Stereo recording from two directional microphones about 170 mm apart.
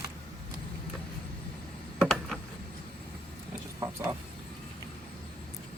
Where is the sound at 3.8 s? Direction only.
15° right (ahead or behind).